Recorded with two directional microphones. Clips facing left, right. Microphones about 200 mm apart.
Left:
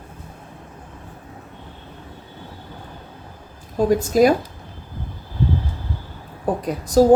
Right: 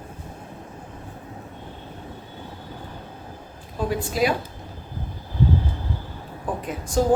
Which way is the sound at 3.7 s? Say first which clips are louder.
Left 8 dB; 45° left (ahead or behind).